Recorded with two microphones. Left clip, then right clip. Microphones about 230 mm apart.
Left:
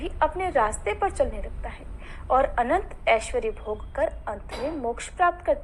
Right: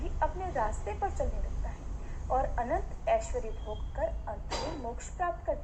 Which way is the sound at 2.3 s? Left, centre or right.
Left.